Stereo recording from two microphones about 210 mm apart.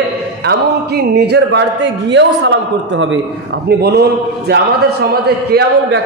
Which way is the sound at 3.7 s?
50° right (ahead or behind).